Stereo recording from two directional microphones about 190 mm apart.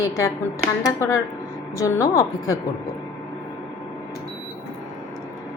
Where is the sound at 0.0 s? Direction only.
15° left (ahead or behind).